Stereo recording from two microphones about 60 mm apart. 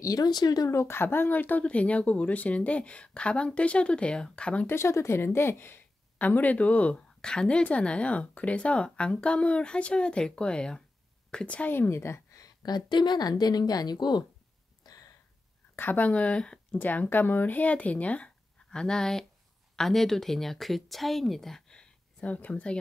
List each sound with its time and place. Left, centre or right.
0.0 s a woman's voice: left
0.7 s speech: left; by 4.6 s centre
4.6 s speech: left
11.7 s a woman's voice: left
12.6 s a woman's voice: left
14.8 s a sound: left
15.7 s a woman's voice: left
16.1 s speech: left
16.7 s speech: left